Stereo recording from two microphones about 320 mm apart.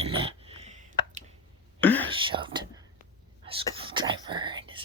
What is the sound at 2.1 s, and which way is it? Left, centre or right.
Whispering, centre.